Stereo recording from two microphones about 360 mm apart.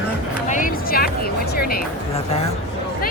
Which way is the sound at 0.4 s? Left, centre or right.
Left.